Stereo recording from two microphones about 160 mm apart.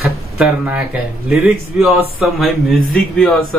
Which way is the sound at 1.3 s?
Centre (ahead or behind).